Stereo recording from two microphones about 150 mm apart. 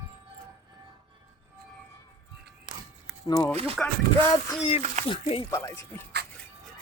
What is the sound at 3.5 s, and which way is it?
Speech, 45° right (ahead or behind).